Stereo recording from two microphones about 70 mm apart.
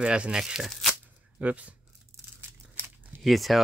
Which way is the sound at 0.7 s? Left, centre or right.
Centre.